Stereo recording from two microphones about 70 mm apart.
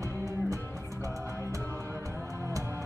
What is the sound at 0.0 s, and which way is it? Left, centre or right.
Music, right.